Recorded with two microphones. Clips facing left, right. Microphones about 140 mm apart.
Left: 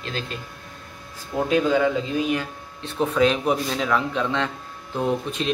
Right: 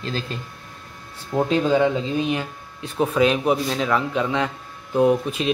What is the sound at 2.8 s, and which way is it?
A man's voice, 10° right (ahead or behind).